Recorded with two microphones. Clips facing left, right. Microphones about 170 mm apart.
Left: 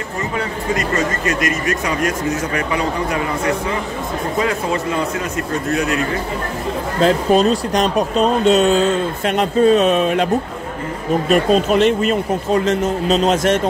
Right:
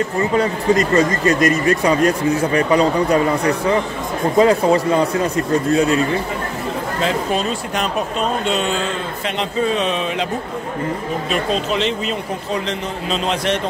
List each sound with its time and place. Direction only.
0.7 s a man's voice: 35° right (ahead or behind)
7.0 s a man's voice: 40° left (ahead or behind)
11.2 s a man's voice: 50° left (ahead or behind)